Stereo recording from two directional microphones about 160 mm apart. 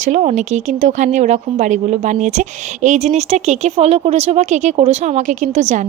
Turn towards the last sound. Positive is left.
turn(degrees=-50)  # may be behind; listen again after turning